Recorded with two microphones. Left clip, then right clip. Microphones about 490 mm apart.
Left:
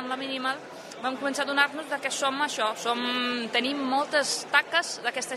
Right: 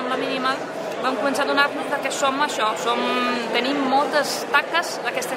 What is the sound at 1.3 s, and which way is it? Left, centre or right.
Speech, left.